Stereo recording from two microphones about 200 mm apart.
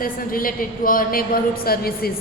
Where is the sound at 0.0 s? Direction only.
45° left (ahead or behind).